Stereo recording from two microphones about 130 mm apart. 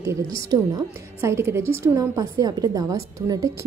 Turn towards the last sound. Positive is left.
turn(degrees=-25)  # may be behind; listen again after turning